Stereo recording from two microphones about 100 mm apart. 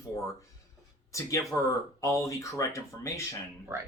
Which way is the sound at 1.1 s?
30° left (ahead or behind).